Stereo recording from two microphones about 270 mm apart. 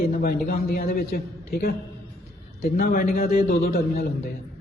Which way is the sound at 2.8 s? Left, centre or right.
Left.